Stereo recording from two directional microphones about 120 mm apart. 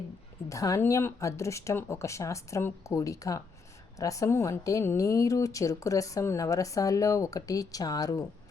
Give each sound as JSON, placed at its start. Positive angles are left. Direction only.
{"t": 0.4, "sound": "speech", "side_deg": 25}